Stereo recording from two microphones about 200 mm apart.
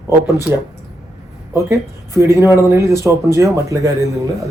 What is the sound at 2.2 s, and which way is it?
Speech, 15° right (ahead or behind).